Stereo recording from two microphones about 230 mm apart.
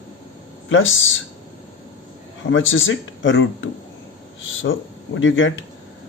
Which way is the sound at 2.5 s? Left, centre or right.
Left.